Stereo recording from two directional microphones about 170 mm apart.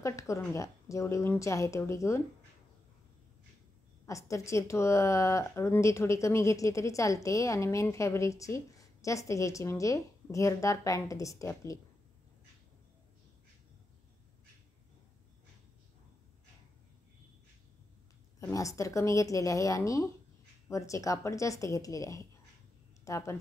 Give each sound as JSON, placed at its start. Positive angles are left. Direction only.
{"t": 0.0, "sound": "a woman's voice", "side_deg": 20}
{"t": 4.0, "sound": "a woman's voice", "side_deg": 20}
{"t": 18.4, "sound": "a woman's voice", "side_deg": 20}